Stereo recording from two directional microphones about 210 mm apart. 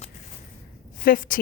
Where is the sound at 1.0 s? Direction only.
40° left (ahead or behind).